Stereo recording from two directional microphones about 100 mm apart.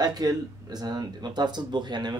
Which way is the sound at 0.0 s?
40° right (ahead or behind).